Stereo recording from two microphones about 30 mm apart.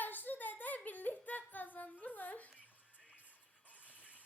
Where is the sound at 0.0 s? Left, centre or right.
Left.